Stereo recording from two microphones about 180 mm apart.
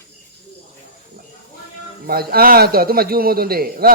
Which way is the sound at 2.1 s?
55° right (ahead or behind).